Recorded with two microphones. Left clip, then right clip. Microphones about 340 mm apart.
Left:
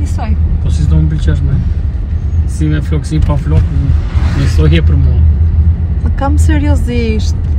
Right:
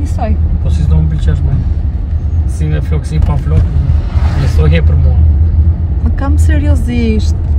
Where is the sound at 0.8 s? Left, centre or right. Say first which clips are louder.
Left 3 dB; centre.